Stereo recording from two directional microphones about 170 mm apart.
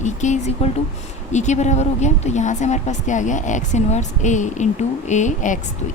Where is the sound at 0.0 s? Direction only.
45° left (ahead or behind).